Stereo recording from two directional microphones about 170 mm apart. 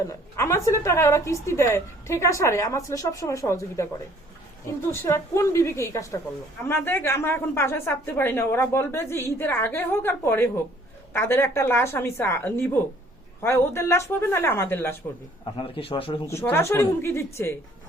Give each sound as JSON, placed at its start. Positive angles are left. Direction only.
{"t": 0.3, "sound": "a woman's voice", "side_deg": 15}
{"t": 4.9, "sound": "a woman's voice", "side_deg": 15}
{"t": 15.5, "sound": "a man's voice", "side_deg": 30}
{"t": 16.2, "sound": "a woman's voice", "side_deg": 15}